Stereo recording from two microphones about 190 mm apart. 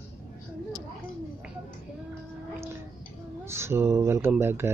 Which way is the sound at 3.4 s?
15° right (ahead or behind).